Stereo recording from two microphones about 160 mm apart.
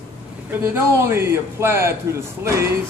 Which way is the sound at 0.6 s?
15° right (ahead or behind).